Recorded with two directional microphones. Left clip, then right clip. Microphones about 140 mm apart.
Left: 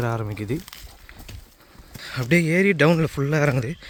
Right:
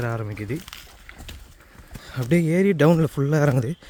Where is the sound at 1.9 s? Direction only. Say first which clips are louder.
Left 6 dB; 15° right (ahead or behind).